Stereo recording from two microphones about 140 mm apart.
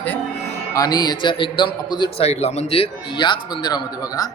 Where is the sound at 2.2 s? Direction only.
50° left (ahead or behind); by 4.3 s 25° left (ahead or behind).